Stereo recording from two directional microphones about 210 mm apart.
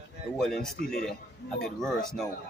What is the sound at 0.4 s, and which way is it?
Speech, centre (ahead or behind).